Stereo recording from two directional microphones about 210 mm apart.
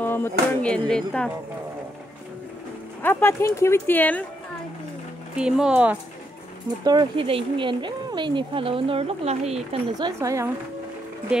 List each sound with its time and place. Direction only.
0.0 s speech: 10° left (ahead or behind)
3.0 s speech: 10° left (ahead or behind)
5.4 s speech: 5° right (ahead or behind)
6.8 s speech: 20° right (ahead or behind)